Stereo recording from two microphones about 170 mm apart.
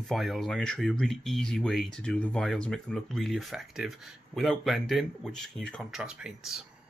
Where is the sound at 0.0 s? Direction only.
Centre (ahead or behind).